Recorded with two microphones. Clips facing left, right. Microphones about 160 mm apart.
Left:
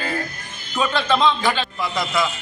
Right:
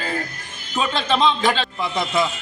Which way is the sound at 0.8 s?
25° right (ahead or behind).